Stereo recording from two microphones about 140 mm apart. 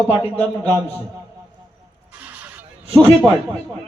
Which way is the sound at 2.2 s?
10° right (ahead or behind).